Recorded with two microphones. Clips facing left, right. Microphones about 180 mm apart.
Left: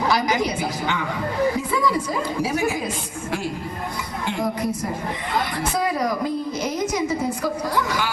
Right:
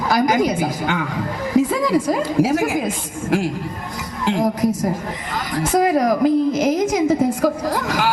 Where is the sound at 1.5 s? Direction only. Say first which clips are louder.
Right 6 dB; 90° right.